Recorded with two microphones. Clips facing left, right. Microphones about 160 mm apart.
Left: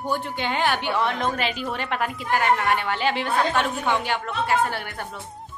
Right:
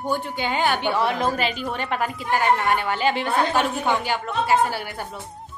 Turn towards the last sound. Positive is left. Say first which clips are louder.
# right 2 dB
turn(degrees=-5)  # may be behind; listen again after turning